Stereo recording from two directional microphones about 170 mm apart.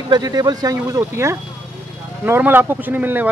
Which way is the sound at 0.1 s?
25° right (ahead or behind).